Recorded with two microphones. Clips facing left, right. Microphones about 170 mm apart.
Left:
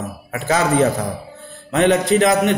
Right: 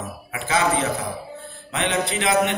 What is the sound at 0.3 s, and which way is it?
A man's voice, 40° left (ahead or behind).